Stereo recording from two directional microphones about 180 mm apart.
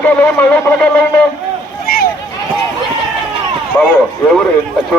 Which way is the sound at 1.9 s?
55° left (ahead or behind).